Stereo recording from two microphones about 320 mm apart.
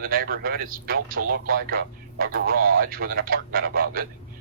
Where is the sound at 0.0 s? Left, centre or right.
Right.